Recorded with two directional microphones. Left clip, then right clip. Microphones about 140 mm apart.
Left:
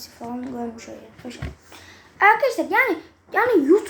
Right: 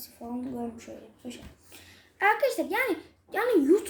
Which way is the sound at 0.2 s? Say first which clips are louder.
Left 6 dB; 25° left (ahead or behind).